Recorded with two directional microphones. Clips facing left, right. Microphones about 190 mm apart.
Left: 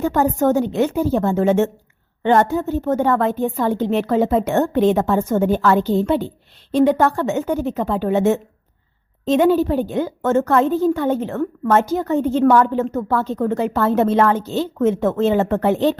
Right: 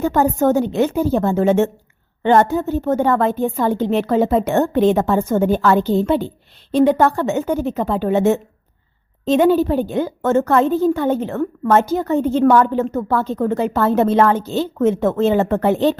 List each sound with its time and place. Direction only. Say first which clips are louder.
0.0 s a woman's voice: right 1 dB; 30° right (ahead or behind)